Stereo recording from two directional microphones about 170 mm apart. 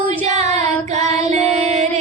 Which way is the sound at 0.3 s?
40° right (ahead or behind).